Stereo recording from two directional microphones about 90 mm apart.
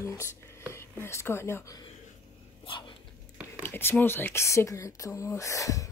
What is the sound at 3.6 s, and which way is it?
Speech, 25° left (ahead or behind).